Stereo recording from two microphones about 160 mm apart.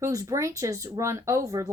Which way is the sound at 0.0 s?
20° right (ahead or behind).